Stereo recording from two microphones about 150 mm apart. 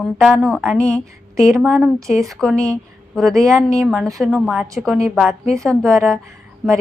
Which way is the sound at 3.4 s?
20° right (ahead or behind).